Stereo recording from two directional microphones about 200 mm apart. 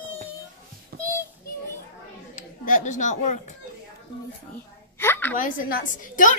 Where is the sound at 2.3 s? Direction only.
40° left (ahead or behind).